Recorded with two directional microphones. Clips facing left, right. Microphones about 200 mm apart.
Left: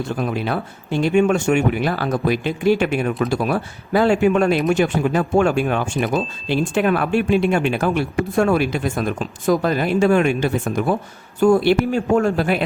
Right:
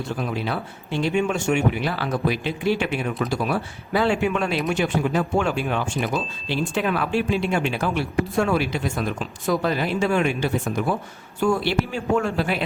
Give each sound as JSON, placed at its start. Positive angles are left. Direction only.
{"t": 0.2, "sound": "speech", "side_deg": 50}